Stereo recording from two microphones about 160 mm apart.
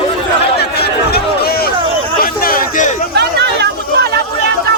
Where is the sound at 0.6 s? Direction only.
90° left; by 3.0 s 55° left (ahead or behind).